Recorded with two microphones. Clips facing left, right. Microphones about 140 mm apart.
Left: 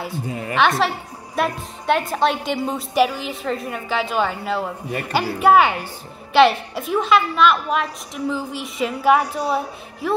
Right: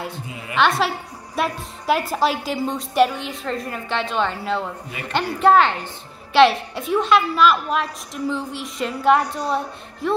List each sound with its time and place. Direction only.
0.3 s a woman's voice: 40° left (ahead or behind)
0.6 s a woman's voice: centre (ahead or behind)